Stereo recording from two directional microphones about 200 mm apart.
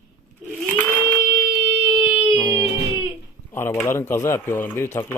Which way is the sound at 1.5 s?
10° right (ahead or behind).